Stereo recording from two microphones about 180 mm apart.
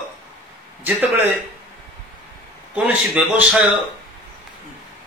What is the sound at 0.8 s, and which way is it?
Speech, 10° right (ahead or behind).